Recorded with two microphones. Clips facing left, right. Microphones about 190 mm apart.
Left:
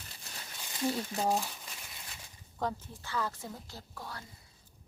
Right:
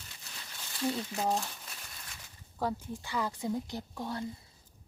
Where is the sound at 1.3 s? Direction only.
5° left (ahead or behind).